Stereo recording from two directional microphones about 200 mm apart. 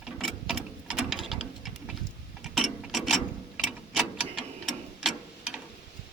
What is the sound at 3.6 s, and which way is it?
Tick-tock, 5° right (ahead or behind).